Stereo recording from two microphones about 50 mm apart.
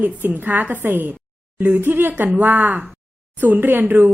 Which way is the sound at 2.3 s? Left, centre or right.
Right.